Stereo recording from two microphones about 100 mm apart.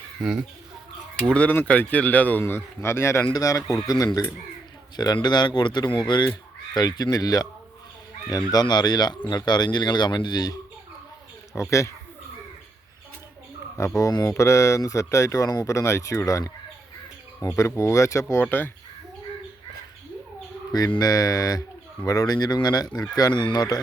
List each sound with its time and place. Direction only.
0.2 s speech: 5° right (ahead or behind)
1.3 s a man's voice: 15° left (ahead or behind); by 7.4 s 40° left (ahead or behind)
8.5 s speech: 45° left (ahead or behind)
11.7 s speech: 30° left (ahead or behind)
13.7 s speech: 30° left (ahead or behind)
17.6 s speech: 30° left (ahead or behind)
21.0 s speech: 40° left (ahead or behind)